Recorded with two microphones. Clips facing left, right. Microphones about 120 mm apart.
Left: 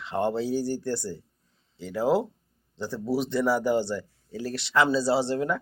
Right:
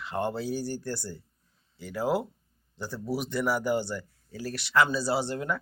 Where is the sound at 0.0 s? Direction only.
25° left (ahead or behind).